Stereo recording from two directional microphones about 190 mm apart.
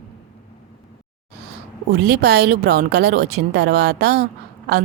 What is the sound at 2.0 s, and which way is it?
Speech, 60° right (ahead or behind).